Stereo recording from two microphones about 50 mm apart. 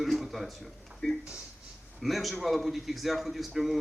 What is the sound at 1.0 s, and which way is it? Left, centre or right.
Speech, centre.